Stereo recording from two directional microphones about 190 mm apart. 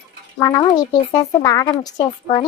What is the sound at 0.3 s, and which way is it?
Speech, 20° left (ahead or behind).